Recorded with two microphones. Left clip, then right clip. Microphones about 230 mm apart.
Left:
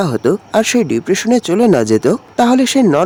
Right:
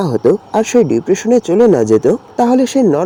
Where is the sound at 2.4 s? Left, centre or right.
Centre.